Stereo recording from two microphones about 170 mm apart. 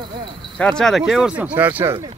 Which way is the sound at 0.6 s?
5° left (ahead or behind).